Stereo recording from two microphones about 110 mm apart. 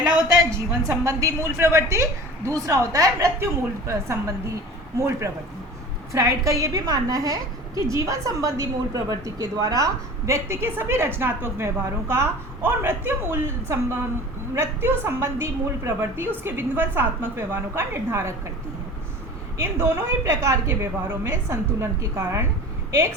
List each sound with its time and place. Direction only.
0.0 s a woman's voice: 30° right (ahead or behind)
19.5 s a woman's voice: 20° right (ahead or behind)